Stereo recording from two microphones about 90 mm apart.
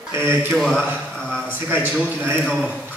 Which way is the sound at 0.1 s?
25° right (ahead or behind).